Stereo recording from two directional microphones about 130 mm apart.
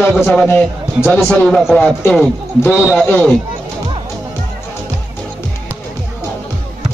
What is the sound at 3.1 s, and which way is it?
Speech, 10° left (ahead or behind).